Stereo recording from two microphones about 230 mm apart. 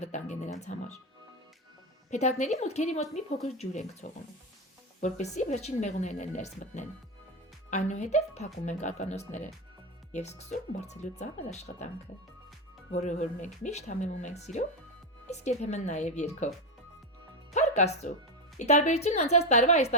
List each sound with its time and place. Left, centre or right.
0.0 s speech: left
2.0 s speech: left
12.9 s speech: left
17.5 s speech: left